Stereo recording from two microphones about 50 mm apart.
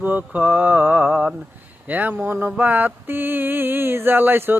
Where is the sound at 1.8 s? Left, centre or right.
Right.